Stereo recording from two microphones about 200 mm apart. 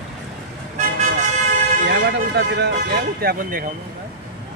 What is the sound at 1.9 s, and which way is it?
Speech, 60° right (ahead or behind).